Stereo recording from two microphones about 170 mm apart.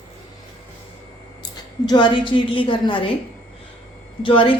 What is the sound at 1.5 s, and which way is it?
A woman's voice, 25° left (ahead or behind).